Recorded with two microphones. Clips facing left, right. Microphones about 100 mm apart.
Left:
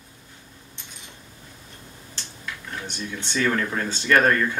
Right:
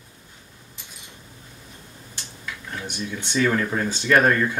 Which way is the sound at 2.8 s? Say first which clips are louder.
Right 4 dB; 10° right (ahead or behind).